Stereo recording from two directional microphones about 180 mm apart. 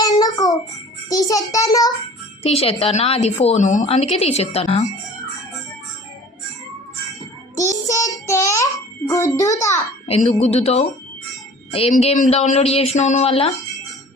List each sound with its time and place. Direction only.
0.0 s child singing: 20° left (ahead or behind)
1.1 s a child's voice: 20° left (ahead or behind)
2.4 s a woman's voice: 35° left (ahead or behind)
7.5 s child singing: 20° left (ahead or behind)
8.3 s music: 15° left (ahead or behind)
9.0 s a child's voice: 15° left (ahead or behind)
10.1 s a woman's voice: 35° left (ahead or behind)